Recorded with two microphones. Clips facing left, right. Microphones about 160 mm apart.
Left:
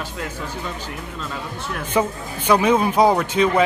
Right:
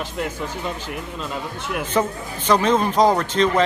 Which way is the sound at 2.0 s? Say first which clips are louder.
Left 2 dB; 10° left (ahead or behind).